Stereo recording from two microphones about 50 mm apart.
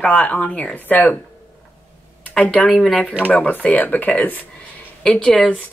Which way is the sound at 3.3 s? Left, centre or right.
Left.